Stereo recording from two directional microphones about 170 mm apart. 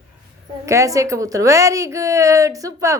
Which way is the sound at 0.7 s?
20° right (ahead or behind).